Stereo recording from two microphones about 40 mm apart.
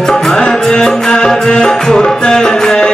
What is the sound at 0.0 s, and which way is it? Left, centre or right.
Music, centre.